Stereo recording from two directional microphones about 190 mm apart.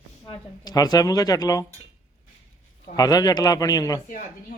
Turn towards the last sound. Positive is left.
turn(degrees=20)  # may be behind; listen again after turning